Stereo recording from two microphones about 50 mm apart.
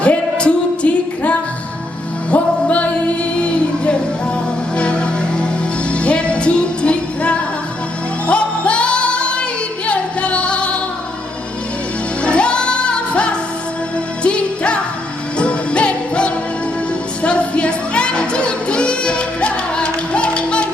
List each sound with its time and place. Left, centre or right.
0.0 s music: left
12.2 s music: left